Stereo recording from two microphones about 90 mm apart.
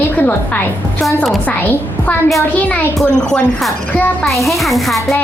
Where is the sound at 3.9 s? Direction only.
20° left (ahead or behind).